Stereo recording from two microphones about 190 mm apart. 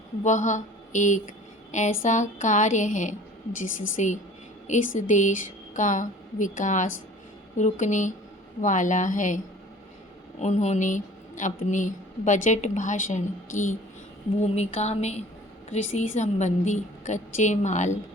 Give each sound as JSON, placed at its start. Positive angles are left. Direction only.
{"t": 0.2, "sound": "a woman's voice", "side_deg": 40}
{"t": 10.4, "sound": "a woman's voice", "side_deg": 35}